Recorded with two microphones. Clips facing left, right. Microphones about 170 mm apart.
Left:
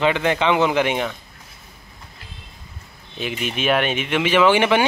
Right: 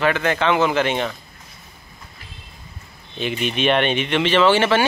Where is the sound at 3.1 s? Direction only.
5° left (ahead or behind).